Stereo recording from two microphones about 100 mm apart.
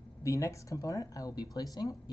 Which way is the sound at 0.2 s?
30° left (ahead or behind).